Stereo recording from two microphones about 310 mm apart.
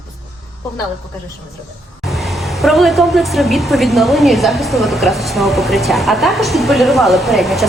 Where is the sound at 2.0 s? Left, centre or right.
Centre.